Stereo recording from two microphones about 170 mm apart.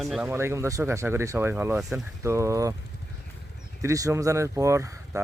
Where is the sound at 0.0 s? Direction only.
Centre (ahead or behind).